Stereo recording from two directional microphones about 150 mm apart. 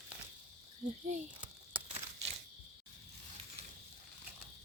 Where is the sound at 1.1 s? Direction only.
55° right (ahead or behind).